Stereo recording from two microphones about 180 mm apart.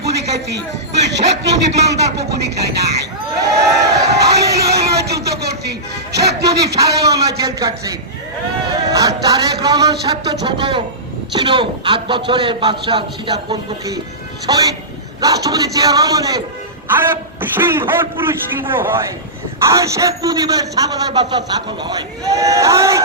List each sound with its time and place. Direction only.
0.0 s a sound: 70° right (ahead or behind)
1.0 s a man's voice: 70° right (ahead or behind)
2.4 s music: 65° right (ahead or behind)
4.2 s music: 65° right (ahead or behind)
4.6 s a sound: 65° right (ahead or behind)
6.1 s music: 65° right (ahead or behind)
6.7 s a man's voice: 20° right (ahead or behind)